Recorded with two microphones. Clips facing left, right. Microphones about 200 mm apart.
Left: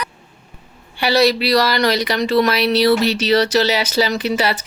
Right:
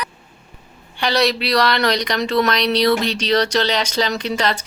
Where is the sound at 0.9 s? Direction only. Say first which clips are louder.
Left 3 dB; 5° left (ahead or behind).